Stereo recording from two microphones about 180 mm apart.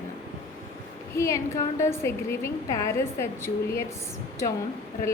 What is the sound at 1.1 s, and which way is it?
A woman's voice, 15° left (ahead or behind).